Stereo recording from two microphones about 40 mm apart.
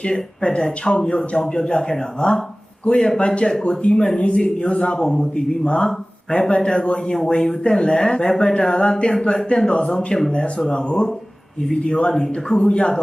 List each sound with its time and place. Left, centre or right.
0.0 s speech: centre
2.8 s speech: left
5.0 s speech: centre
5.6 s speech: left
10.1 s speech: centre
10.7 s speech: left